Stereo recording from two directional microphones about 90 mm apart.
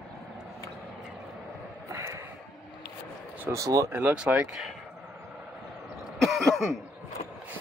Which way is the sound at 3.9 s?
20° right (ahead or behind).